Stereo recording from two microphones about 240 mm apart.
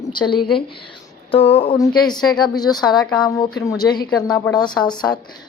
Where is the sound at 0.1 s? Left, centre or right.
Centre.